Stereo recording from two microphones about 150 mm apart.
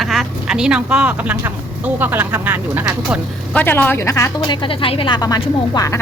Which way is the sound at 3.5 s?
10° left (ahead or behind).